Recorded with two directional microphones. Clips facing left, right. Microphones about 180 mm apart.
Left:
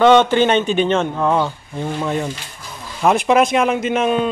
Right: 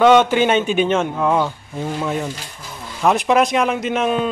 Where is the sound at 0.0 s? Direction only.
5° right (ahead or behind).